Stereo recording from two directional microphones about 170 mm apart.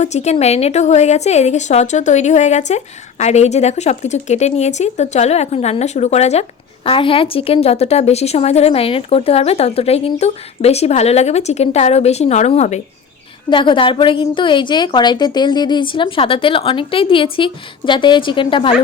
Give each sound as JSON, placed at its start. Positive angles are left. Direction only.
{"t": 0.0, "sound": "a woman's voice", "side_deg": 40}
{"t": 13.5, "sound": "a woman's voice", "side_deg": 30}